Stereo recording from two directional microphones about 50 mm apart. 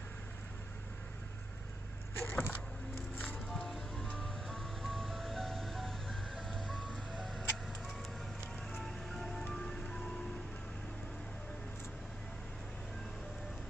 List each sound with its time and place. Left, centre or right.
2.1 s a sound: left
3.3 s music: centre
8.8 s music: centre